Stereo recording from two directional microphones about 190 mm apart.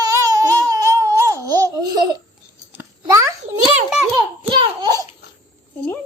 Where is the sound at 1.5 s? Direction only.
20° right (ahead or behind).